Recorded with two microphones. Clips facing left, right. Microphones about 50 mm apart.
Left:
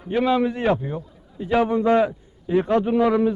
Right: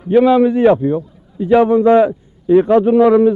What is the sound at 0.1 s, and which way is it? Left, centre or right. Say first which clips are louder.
A man's voice: right 10 dB; right.